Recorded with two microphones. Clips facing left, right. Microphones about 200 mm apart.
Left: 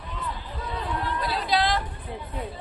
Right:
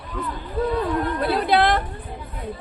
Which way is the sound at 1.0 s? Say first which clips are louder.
Right 7 dB; 55° right (ahead or behind).